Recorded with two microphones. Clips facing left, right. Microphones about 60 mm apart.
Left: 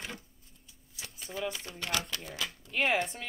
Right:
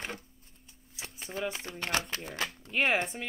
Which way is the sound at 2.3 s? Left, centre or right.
Right.